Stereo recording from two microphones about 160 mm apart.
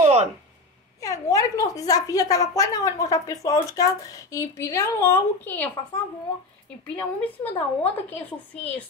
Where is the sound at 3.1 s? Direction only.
20° left (ahead or behind).